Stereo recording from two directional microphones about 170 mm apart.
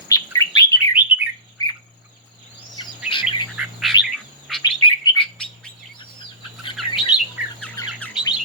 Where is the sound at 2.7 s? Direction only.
25° left (ahead or behind).